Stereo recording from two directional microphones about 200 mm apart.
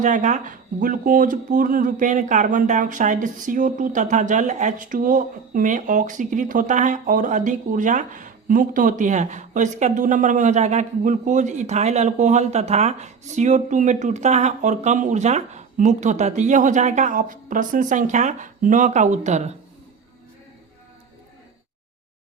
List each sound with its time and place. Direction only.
0.0 s speech: 40° right (ahead or behind)